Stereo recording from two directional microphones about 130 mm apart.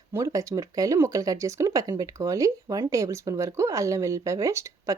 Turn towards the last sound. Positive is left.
turn(degrees=-25)  # may be behind; listen again after turning